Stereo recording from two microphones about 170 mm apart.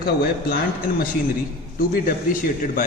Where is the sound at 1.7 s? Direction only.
60° left (ahead or behind).